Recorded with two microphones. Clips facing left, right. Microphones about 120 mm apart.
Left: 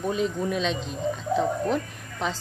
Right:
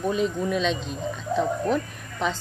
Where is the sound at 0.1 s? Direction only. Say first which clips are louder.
Even; 25° left (ahead or behind).